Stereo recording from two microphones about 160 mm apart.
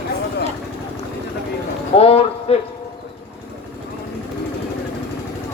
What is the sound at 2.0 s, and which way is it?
Speech, 40° left (ahead or behind).